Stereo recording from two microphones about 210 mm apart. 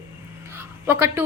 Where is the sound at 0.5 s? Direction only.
10° right (ahead or behind).